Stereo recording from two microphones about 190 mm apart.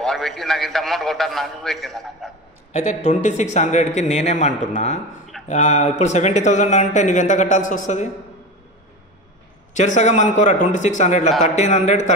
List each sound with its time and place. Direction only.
0.0 s a man's voice: centre (ahead or behind)
2.7 s speech: 35° left (ahead or behind)
9.8 s speech: 40° left (ahead or behind)